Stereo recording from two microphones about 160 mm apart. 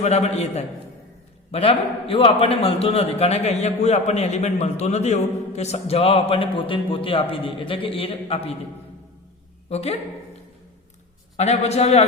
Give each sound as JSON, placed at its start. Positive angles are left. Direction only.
{"t": 0.0, "sound": "a man's voice", "side_deg": 40}
{"t": 9.6, "sound": "a man's voice", "side_deg": 40}
{"t": 11.3, "sound": "a man's voice", "side_deg": 40}